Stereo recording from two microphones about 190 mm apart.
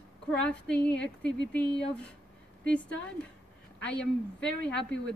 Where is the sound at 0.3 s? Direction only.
5° left (ahead or behind).